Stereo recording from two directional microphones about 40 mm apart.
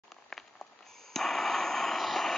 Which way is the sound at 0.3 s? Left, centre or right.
Centre.